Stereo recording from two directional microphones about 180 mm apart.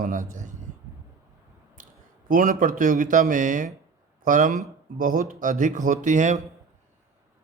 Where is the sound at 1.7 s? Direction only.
50° right (ahead or behind).